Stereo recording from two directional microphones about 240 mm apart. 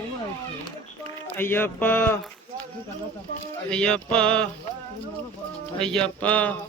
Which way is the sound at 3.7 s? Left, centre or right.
Centre.